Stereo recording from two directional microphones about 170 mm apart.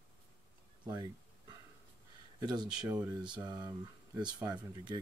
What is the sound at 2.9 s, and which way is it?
Speech, 5° right (ahead or behind).